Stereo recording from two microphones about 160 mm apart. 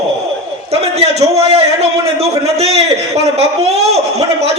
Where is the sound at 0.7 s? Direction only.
40° right (ahead or behind).